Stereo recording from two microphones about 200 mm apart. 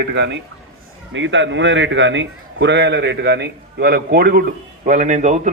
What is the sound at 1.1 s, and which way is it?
A man's voice, 65° right (ahead or behind).